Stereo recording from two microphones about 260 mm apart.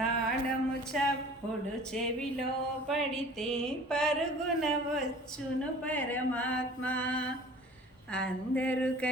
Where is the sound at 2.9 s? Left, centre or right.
Centre.